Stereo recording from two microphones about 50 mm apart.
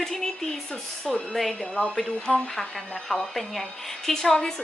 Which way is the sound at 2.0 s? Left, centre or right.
Centre.